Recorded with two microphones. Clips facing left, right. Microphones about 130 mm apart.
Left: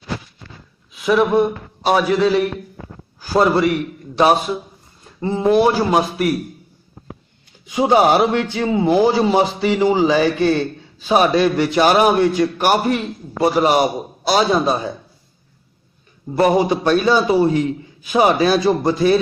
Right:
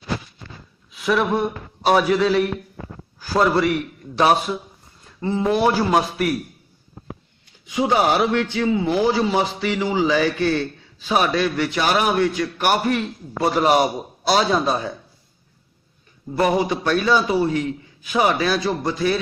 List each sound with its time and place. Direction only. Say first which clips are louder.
0.9 s speech: left 5 dB; 10° left (ahead or behind)
1.8 s a man's voice: left 1 dB; centre (ahead or behind)
3.2 s a man's voice: left 3 dB; 25° left (ahead or behind)
3.6 s a man's voice: left 3 dB; centre (ahead or behind)
5.2 s a man's voice: left 4 dB; 20° left (ahead or behind)
7.7 s a man's voice: left 5 dB; 25° left (ahead or behind)
13.4 s a man's voice: left 2 dB; 10° left (ahead or behind)
16.4 s a man's voice: left 4 dB; 30° left (ahead or behind)